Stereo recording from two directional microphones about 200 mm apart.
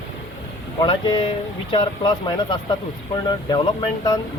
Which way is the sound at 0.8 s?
25° left (ahead or behind).